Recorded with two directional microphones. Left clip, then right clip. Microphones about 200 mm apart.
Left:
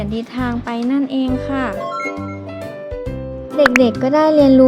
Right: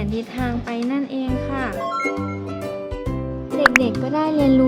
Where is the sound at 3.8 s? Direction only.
30° left (ahead or behind).